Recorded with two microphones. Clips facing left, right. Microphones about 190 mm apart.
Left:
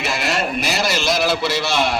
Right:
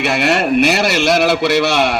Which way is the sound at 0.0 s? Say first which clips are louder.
Right 7 dB; 65° right (ahead or behind).